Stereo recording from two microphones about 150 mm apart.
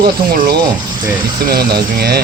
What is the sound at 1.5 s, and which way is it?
Speech, 90° right.